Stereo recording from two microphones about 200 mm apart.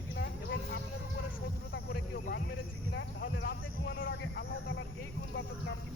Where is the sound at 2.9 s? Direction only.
65° left (ahead or behind).